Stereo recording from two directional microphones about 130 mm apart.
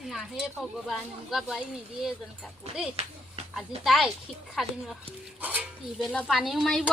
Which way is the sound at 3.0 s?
55° right (ahead or behind).